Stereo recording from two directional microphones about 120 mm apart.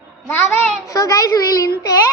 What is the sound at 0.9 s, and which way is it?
A child's voice, 30° left (ahead or behind).